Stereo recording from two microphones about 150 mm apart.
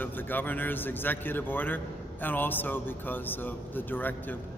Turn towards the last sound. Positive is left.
turn(degrees=10)  # may be behind; listen again after turning